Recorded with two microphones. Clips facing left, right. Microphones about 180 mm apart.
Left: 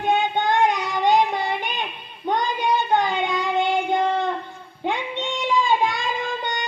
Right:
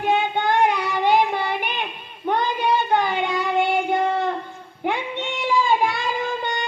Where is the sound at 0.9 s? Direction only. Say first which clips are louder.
Even; 10° right (ahead or behind).